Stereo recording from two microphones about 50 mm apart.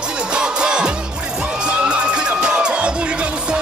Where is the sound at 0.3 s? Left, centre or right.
Centre.